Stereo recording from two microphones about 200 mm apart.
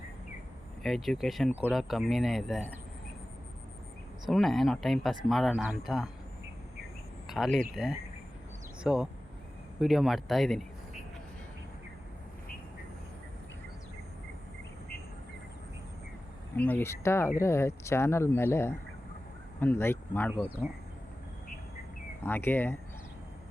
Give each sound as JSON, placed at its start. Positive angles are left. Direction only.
{"t": 0.8, "sound": "speech", "side_deg": 0}
{"t": 4.3, "sound": "speech", "side_deg": 0}
{"t": 7.3, "sound": "speech", "side_deg": 0}
{"t": 16.6, "sound": "speech", "side_deg": 10}
{"t": 22.2, "sound": "speech", "side_deg": 10}